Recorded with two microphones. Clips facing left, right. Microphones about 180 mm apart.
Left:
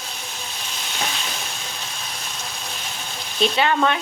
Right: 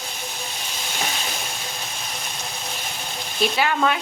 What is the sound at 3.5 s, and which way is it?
Stir, 5° right (ahead or behind).